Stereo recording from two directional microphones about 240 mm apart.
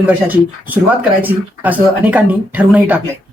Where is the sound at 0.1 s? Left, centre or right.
Centre.